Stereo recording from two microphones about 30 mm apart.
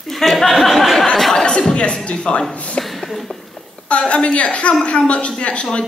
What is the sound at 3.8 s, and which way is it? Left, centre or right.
A woman's voice, left.